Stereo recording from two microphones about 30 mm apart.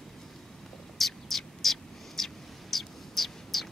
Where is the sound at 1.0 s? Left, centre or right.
Centre.